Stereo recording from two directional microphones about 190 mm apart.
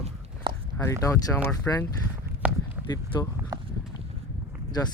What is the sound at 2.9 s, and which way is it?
Speech, 20° left (ahead or behind).